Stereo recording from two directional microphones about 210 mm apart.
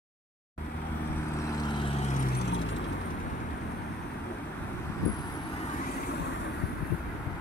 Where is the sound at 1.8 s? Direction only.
30° left (ahead or behind).